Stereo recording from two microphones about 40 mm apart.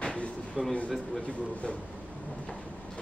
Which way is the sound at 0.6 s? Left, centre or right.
Centre.